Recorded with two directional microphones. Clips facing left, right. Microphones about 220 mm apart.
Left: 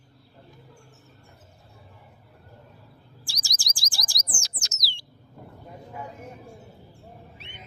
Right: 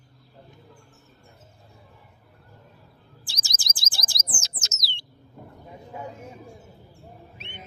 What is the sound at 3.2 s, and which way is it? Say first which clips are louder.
Chirp: right 1 dB; 20° right (ahead or behind).